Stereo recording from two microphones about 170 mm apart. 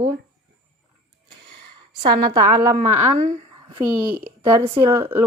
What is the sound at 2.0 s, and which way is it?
Speech, 55° right (ahead or behind).